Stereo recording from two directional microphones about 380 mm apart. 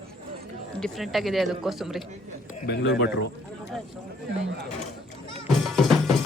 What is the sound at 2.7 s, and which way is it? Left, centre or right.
Speech, left.